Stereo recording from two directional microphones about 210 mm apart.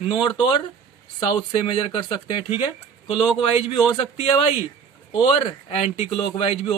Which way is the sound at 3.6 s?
30° left (ahead or behind).